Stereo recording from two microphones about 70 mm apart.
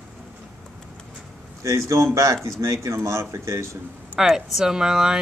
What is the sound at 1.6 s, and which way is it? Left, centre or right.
Speech, right.